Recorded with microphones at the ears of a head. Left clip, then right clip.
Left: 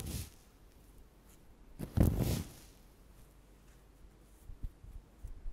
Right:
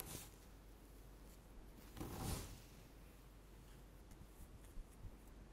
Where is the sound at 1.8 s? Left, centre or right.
Left.